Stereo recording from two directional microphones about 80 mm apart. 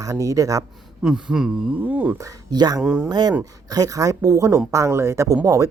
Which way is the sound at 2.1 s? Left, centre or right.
Right.